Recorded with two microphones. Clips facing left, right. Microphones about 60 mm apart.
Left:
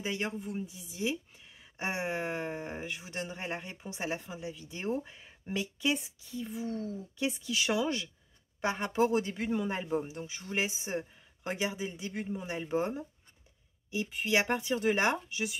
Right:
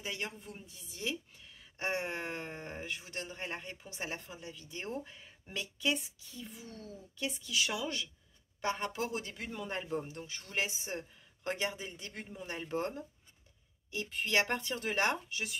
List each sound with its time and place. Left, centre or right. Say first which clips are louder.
0.0 s a woman's voice: left 6 dB; left